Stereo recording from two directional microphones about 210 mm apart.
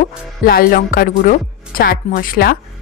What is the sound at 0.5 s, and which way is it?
Speech, 45° left (ahead or behind).